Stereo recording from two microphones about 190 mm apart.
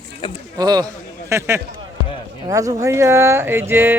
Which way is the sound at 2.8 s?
15° right (ahead or behind).